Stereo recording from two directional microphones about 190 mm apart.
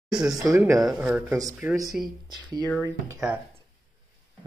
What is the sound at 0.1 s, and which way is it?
Speech, 5° right (ahead or behind).